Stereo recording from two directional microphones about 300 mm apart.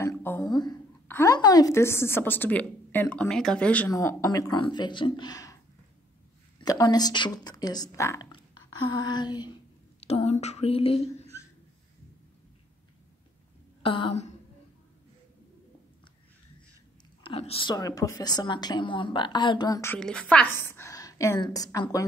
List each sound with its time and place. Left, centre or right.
0.0 s a woman's voice: centre
6.6 s a woman's voice: centre
8.9 s a sound: centre
13.8 s a woman's voice: centre
17.2 s a woman's voice: centre